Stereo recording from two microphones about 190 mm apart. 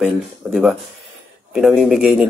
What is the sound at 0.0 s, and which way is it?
Speech, centre (ahead or behind).